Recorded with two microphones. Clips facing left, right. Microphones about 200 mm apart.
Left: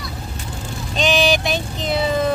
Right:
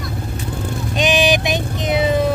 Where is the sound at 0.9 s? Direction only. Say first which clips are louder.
Right 1 dB; 15° right (ahead or behind).